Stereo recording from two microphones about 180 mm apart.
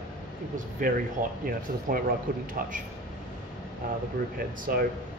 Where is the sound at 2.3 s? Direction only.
50° right (ahead or behind).